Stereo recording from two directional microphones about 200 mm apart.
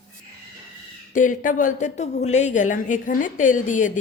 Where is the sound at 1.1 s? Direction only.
40° left (ahead or behind).